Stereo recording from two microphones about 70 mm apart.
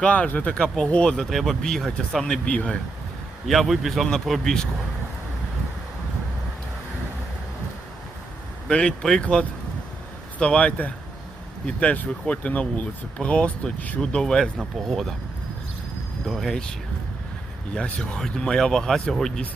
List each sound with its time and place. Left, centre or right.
0.0 s speech: centre
3.4 s speech: centre
8.7 s speech: centre
14.0 s speech: centre
16.2 s speech: centre
17.7 s speech: centre